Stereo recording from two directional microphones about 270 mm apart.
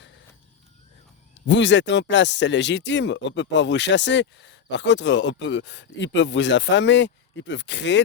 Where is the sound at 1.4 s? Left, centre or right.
Left.